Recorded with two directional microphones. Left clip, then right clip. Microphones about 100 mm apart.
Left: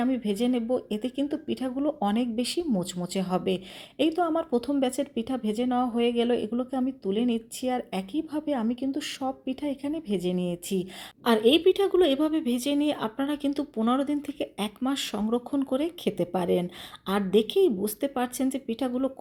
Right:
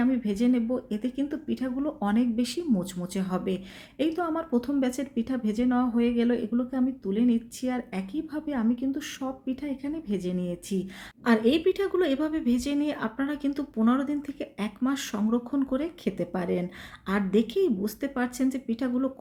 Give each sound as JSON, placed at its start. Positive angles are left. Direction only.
{"t": 0.0, "sound": "speech", "side_deg": 35}
{"t": 16.3, "sound": "speech", "side_deg": 35}
{"t": 17.4, "sound": "a woman's voice", "side_deg": -40}
{"t": 18.1, "sound": "speech", "side_deg": 25}
{"t": 18.4, "sound": "speech", "side_deg": -50}
{"t": 18.8, "sound": "speech", "side_deg": 20}